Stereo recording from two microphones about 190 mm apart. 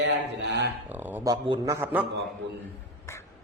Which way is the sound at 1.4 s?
20° right (ahead or behind).